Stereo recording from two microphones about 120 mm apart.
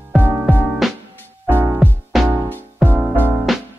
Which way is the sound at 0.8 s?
Centre (ahead or behind).